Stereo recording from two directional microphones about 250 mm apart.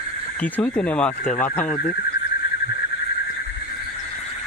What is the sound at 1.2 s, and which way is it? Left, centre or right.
Speech, left.